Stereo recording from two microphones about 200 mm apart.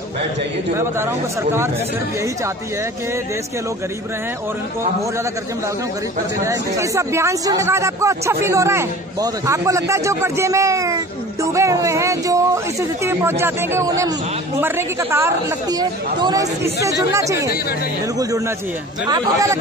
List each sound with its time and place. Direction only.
0.7 s speech: 10° right (ahead or behind)
6.4 s speech: 15° right (ahead or behind)
19.0 s speech: 20° right (ahead or behind)